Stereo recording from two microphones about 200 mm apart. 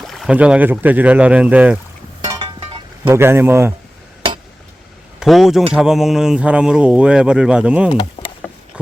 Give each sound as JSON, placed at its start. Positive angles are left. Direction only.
{"t": 0.0, "sound": "speech", "side_deg": 0}
{"t": 2.2, "sound": "a sound", "side_deg": -20}
{"t": 3.0, "sound": "speech", "side_deg": -10}
{"t": 5.2, "sound": "speech", "side_deg": 0}